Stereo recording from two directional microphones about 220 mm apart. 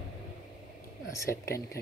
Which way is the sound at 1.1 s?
15° left (ahead or behind).